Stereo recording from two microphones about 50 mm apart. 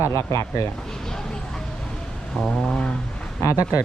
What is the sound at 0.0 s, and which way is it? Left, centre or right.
Speech, left.